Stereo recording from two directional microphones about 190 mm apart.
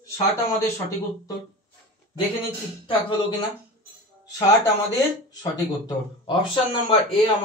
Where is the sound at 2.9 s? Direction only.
25° left (ahead or behind).